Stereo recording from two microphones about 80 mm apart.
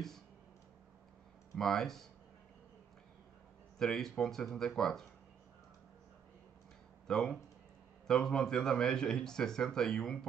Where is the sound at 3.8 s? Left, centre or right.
Centre.